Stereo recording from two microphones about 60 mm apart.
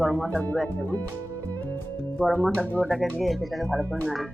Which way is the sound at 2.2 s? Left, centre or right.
Left.